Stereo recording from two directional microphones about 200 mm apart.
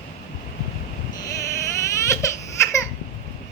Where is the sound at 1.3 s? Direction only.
15° left (ahead or behind).